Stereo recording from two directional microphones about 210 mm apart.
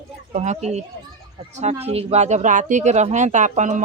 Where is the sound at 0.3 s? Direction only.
35° right (ahead or behind).